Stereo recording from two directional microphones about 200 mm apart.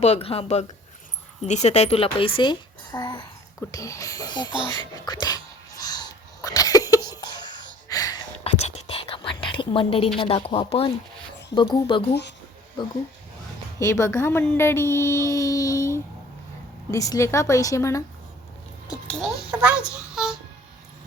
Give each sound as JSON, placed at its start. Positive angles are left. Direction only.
{"t": 0.0, "sound": "a woman's voice", "side_deg": 30}
{"t": 4.7, "sound": "a sound", "side_deg": 20}
{"t": 8.4, "sound": "whispering", "side_deg": 30}
{"t": 10.2, "sound": "a woman's voice", "side_deg": 25}
{"t": 13.7, "sound": "a woman's voice", "side_deg": 15}
{"t": 19.5, "sound": "a sound", "side_deg": -5}